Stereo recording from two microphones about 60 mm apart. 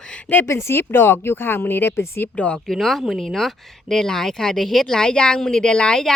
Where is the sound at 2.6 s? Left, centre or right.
Centre.